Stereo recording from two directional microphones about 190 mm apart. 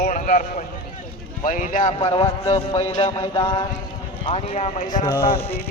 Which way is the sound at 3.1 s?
15° left (ahead or behind).